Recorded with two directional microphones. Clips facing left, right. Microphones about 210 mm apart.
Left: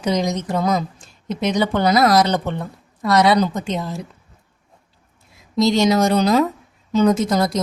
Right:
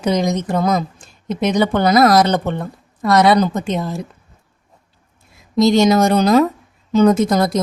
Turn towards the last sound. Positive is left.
turn(degrees=-55)  # may be behind; listen again after turning